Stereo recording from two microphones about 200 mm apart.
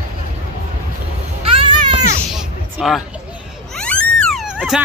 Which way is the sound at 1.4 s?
25° right (ahead or behind).